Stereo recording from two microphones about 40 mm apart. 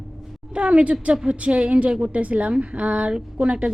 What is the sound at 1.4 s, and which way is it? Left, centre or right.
A woman's voice, right.